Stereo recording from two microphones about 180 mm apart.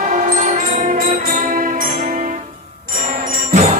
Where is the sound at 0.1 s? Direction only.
50° right (ahead or behind).